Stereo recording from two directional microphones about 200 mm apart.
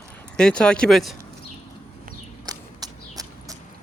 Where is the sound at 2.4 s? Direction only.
20° right (ahead or behind).